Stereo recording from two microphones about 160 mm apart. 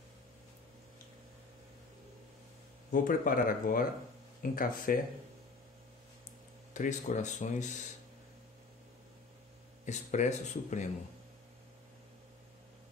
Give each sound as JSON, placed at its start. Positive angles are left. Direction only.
{"t": 2.9, "sound": "speech", "side_deg": 60}
{"t": 6.7, "sound": "speech", "side_deg": 50}
{"t": 9.8, "sound": "speech", "side_deg": 45}